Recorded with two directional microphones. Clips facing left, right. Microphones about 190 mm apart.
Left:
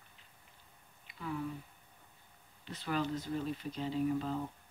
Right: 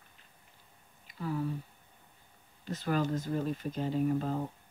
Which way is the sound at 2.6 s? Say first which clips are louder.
Right 4 dB; 45° right (ahead or behind).